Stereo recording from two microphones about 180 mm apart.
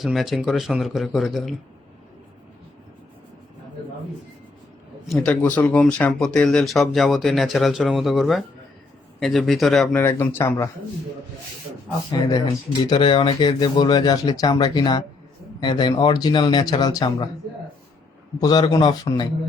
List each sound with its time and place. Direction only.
0.0 s speech: centre (ahead or behind)
5.0 s speech: 5° left (ahead or behind)
10.0 s speech: 15° left (ahead or behind)
12.1 s speech: 20° left (ahead or behind)
18.3 s speech: 20° left (ahead or behind)